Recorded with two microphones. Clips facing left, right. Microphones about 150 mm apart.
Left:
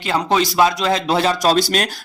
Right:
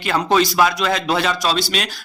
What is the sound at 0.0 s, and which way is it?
Speech, 20° left (ahead or behind).